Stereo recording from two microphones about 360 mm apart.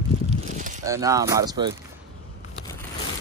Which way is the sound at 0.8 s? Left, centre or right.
Centre.